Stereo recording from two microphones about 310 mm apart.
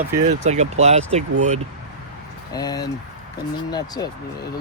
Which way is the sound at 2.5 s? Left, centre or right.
Centre.